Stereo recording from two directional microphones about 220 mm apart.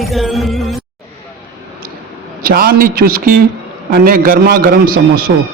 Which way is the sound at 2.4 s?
45° right (ahead or behind).